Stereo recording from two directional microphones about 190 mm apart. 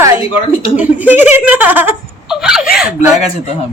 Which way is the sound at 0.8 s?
10° right (ahead or behind).